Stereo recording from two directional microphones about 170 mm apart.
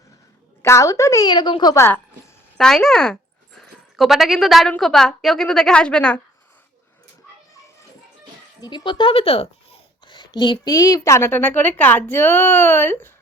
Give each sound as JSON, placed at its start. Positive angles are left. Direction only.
{"t": 0.6, "sound": "a woman's voice", "side_deg": 15}
{"t": 1.7, "sound": "a child's voice", "side_deg": 15}
{"t": 2.6, "sound": "speech", "side_deg": 5}
{"t": 8.6, "sound": "a child's voice", "side_deg": 25}